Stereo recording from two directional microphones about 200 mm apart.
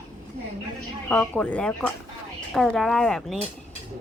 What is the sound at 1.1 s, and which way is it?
Speech, 5° left (ahead or behind).